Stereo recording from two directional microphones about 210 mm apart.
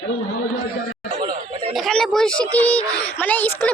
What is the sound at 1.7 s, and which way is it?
Speech, centre (ahead or behind).